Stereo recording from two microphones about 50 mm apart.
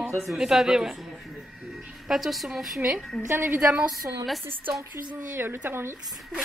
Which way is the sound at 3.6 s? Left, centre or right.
Right.